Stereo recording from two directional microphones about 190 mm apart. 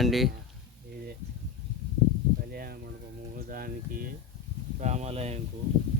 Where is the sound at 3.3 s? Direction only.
50° right (ahead or behind).